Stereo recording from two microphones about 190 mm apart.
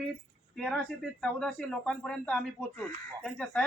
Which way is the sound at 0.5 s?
Centre (ahead or behind).